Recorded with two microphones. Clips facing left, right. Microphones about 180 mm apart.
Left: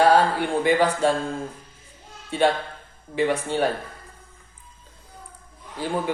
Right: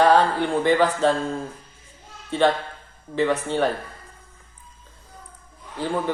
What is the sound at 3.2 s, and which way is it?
Speech, 10° left (ahead or behind).